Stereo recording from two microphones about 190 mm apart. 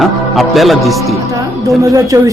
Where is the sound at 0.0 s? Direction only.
Centre (ahead or behind).